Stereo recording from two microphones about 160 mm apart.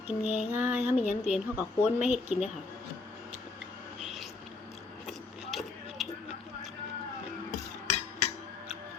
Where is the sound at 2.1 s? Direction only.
45° left (ahead or behind).